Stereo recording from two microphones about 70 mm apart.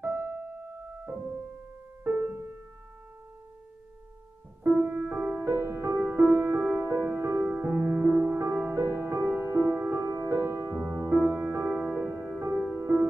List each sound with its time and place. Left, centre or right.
0.0 s keyboard: right
2.0 s music: right
4.6 s music: right
5.4 s music: right